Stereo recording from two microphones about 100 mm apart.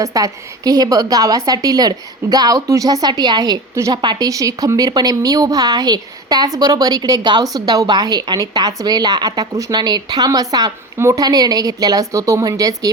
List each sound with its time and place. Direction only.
0.0 s a woman's voice: 35° right (ahead or behind)
4.3 s a woman's voice: 35° right (ahead or behind)